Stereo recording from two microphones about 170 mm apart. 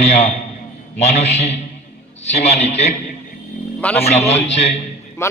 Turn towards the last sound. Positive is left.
turn(degrees=15)  # may be behind; listen again after turning